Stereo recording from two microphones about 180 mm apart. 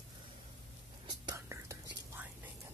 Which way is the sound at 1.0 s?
20° right (ahead or behind).